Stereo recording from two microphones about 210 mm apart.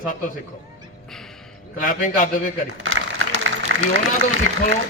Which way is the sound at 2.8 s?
70° right (ahead or behind).